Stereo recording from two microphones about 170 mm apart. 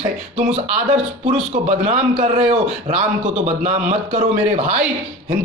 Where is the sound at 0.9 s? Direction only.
40° right (ahead or behind).